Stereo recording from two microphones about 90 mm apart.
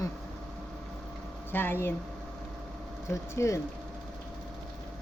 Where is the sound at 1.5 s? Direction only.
25° left (ahead or behind).